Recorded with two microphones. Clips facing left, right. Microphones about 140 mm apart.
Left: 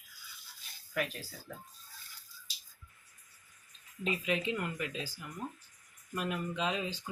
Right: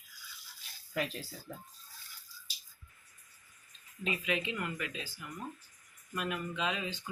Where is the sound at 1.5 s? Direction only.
30° right (ahead or behind).